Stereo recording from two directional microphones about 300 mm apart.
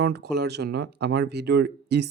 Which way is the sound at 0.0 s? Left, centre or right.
Right.